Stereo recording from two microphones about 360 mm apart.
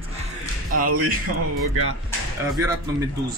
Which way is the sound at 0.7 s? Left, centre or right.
Right.